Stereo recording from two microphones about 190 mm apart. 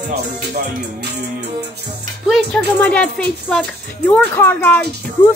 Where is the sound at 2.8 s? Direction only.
5° left (ahead or behind).